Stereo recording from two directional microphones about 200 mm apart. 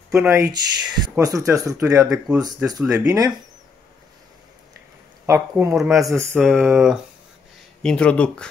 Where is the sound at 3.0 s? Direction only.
15° right (ahead or behind).